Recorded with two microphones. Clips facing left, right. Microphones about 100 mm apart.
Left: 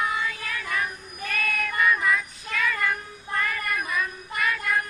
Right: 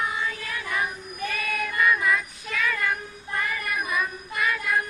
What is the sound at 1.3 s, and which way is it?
Child singing, 5° right (ahead or behind).